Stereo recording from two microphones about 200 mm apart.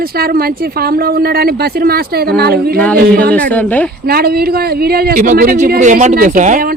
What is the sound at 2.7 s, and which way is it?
Speech, 5° left (ahead or behind).